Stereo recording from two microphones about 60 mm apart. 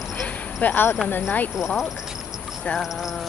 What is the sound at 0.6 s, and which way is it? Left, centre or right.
Speech, left.